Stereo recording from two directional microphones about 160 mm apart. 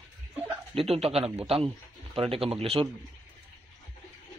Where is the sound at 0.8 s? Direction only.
40° right (ahead or behind).